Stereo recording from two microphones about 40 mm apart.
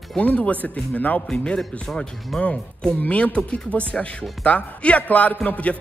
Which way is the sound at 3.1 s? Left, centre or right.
Left.